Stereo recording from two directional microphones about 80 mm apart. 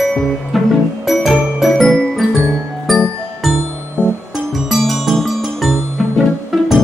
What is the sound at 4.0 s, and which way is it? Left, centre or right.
Music, centre.